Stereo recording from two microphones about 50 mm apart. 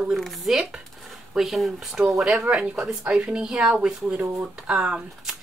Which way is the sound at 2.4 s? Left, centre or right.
Right.